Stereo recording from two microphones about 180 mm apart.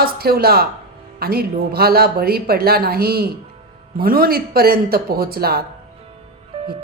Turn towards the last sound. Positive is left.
turn(degrees=-35)  # may be behind; listen again after turning